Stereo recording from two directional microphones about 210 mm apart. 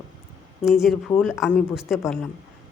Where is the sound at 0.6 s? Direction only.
Centre (ahead or behind).